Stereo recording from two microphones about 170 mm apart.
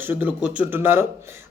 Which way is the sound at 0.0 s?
10° right (ahead or behind).